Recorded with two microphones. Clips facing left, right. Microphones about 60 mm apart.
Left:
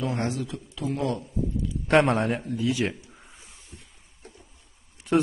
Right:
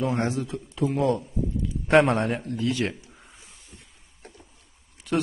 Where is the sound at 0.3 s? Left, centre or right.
Right.